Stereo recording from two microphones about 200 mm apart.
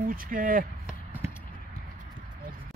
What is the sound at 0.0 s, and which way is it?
Speech, 45° right (ahead or behind).